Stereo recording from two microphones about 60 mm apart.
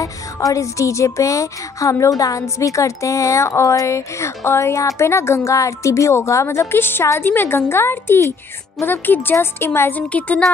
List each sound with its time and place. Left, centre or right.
0.0 s a woman's voice: left
8.2 s speech: left
8.8 s a woman's voice: left